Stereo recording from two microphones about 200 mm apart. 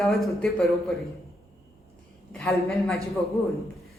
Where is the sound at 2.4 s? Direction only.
Centre (ahead or behind).